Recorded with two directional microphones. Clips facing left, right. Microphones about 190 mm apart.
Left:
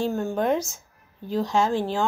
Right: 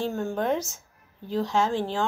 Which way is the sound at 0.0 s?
5° left (ahead or behind).